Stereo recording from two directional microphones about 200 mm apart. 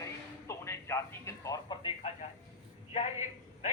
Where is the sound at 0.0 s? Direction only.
15° left (ahead or behind).